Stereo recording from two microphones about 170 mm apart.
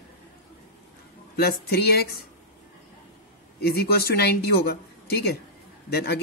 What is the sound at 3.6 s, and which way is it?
Speech, 65° left (ahead or behind).